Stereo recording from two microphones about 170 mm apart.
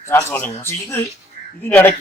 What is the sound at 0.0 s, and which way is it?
Speech, 15° left (ahead or behind).